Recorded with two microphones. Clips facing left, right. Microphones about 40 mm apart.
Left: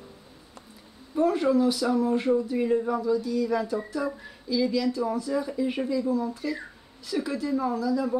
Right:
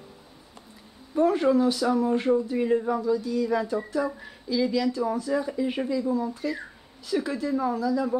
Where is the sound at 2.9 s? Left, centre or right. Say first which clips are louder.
Even; centre.